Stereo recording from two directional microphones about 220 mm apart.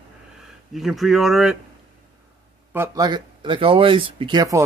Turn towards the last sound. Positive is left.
turn(degrees=-15)  # may be behind; listen again after turning